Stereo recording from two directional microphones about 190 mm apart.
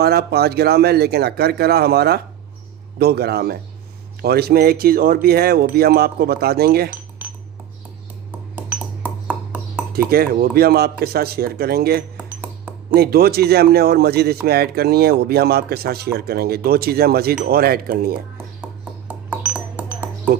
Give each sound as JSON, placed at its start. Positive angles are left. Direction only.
{"t": 0.0, "sound": "speech", "side_deg": -55}
{"t": 8.5, "sound": "ping", "side_deg": -10}
{"t": 10.1, "sound": "speech", "side_deg": -55}
{"t": 12.1, "sound": "a sound", "side_deg": -10}
{"t": 12.9, "sound": "speech", "side_deg": -55}
{"t": 18.6, "sound": "ping", "side_deg": -5}